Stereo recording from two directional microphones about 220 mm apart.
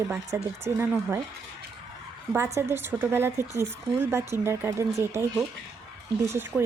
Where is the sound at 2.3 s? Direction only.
10° right (ahead or behind).